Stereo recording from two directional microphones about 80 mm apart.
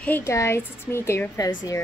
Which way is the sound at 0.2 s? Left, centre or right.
Left.